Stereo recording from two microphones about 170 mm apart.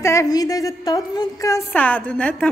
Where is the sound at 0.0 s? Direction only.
15° left (ahead or behind).